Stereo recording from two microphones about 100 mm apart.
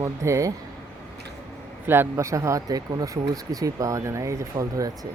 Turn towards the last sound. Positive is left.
turn(degrees=-35)  # may be behind; listen again after turning